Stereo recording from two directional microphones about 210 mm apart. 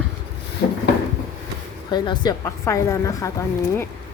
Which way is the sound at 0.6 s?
55° left (ahead or behind).